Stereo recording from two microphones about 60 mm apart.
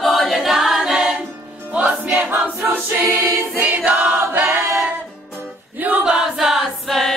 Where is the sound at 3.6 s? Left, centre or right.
Right.